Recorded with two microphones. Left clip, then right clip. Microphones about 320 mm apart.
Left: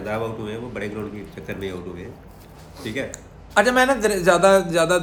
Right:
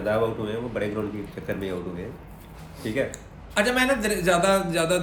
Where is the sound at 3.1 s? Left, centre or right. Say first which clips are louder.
Left 6 dB; centre.